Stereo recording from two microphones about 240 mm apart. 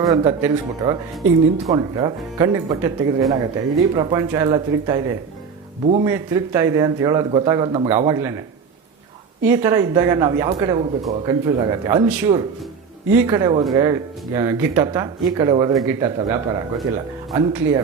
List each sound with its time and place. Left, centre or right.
0.0 s speech: centre
5.8 s speech: right
6.1 s speech: centre